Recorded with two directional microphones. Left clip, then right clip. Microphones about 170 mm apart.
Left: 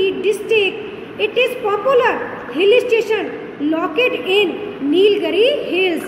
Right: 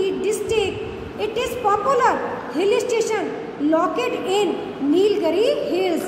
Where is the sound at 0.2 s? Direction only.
25° right (ahead or behind).